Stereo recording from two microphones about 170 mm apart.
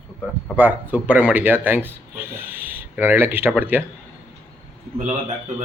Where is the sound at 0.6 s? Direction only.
10° right (ahead or behind).